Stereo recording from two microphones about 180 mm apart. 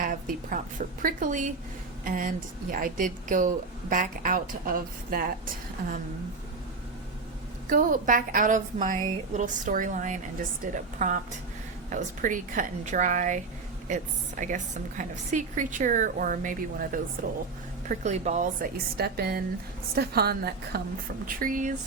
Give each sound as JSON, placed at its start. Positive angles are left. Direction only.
{"t": 0.0, "sound": "a sound", "side_deg": -50}
{"t": 1.0, "sound": "a woman's voice", "side_deg": -45}
{"t": 7.7, "sound": "a woman's voice", "side_deg": -50}
{"t": 17.8, "sound": "speech", "side_deg": -40}
{"t": 18.9, "sound": "a woman's voice", "side_deg": -60}